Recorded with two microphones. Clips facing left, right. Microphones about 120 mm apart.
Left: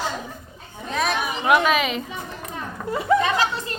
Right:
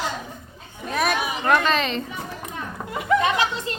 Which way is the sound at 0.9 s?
5° right (ahead or behind).